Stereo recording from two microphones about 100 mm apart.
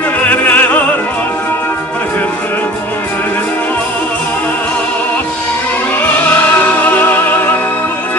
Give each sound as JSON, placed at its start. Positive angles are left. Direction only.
{"t": 0.2, "sound": "opera", "side_deg": 15}
{"t": 6.3, "sound": "music", "side_deg": 15}